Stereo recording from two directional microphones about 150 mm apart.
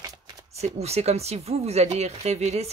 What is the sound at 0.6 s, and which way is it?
Speech, 45° right (ahead or behind).